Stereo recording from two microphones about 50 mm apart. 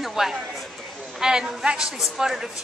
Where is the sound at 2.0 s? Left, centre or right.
Centre.